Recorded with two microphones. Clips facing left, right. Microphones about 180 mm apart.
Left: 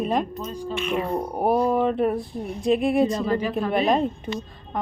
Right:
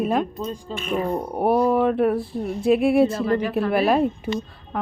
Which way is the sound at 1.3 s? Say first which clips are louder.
Right 2 dB; centre (ahead or behind).